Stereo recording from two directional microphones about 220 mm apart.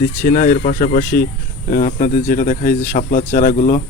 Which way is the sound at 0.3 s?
40° left (ahead or behind).